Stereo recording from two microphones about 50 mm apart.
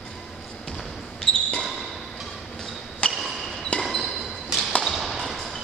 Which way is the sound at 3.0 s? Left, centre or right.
Left.